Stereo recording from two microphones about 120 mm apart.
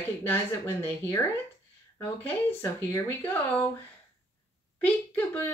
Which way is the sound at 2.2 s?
20° left (ahead or behind).